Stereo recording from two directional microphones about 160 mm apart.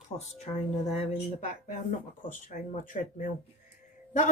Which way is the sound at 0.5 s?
40° left (ahead or behind).